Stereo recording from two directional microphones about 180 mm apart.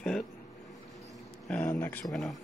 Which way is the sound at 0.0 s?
Centre (ahead or behind).